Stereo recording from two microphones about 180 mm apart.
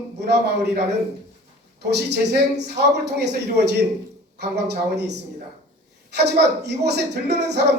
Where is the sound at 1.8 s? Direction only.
65° right (ahead or behind).